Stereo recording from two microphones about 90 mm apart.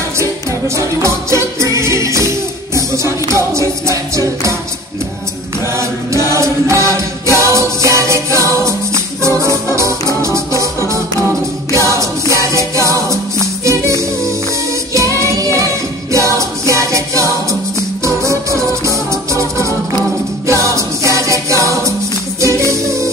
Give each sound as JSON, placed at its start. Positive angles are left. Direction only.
{"t": 0.2, "sound": "music", "side_deg": -35}
{"t": 6.3, "sound": "music", "side_deg": -35}